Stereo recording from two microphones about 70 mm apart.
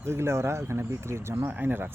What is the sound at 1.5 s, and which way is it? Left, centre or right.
Speech, right.